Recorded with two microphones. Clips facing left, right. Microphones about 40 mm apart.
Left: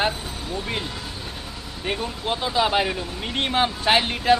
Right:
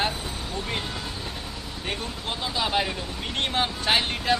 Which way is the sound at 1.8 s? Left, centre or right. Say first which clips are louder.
Left 6 dB; centre.